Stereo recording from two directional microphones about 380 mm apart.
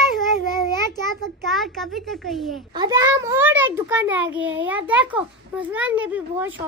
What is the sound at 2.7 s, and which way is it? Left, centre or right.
A child's voice, centre.